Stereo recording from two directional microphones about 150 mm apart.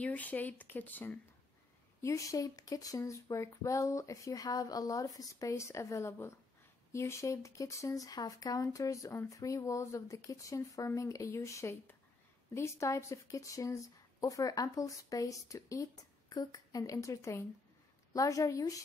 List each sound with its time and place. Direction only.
0.0 s speech: 10° left (ahead or behind)